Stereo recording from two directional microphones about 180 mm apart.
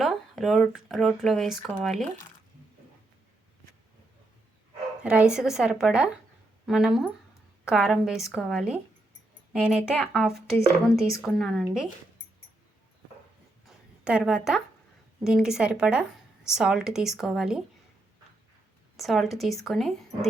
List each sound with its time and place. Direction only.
0.0 s speech: centre (ahead or behind)
5.0 s speech: 5° right (ahead or behind)
11.0 s a woman's voice: 15° left (ahead or behind)
11.3 s speech: centre (ahead or behind)
13.7 s a sound: 5° right (ahead or behind)
15.2 s speech: 5° right (ahead or behind)
18.9 s speech: centre (ahead or behind)